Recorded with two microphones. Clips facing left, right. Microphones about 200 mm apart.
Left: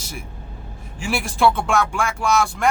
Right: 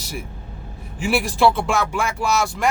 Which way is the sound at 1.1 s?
Centre (ahead or behind).